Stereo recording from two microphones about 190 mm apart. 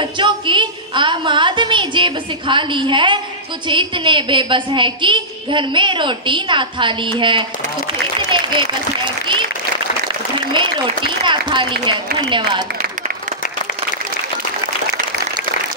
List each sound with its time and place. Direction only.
0.0 s a woman's voice: 25° right (ahead or behind)
8.3 s applause: 25° right (ahead or behind)
11.8 s a woman's voice: 25° right (ahead or behind)